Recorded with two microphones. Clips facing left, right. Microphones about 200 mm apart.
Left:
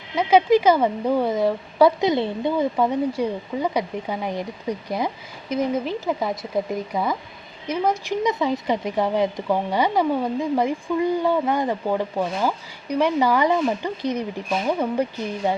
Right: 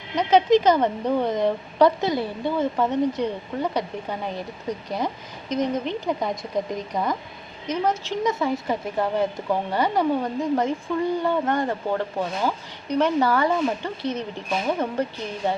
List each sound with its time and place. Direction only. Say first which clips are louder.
0.2 s speech: left 1 dB; 10° left (ahead or behind)
2.0 s speech: left 3 dB; 20° left (ahead or behind)
2.7 s speech: left 1 dB; 10° left (ahead or behind)